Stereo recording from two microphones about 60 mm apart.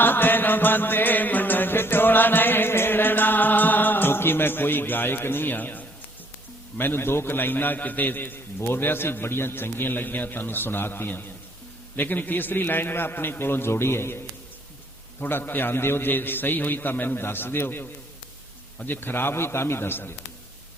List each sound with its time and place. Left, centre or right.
0.0 s music: left
6.7 s a man's voice: left
15.2 s a man's voice: left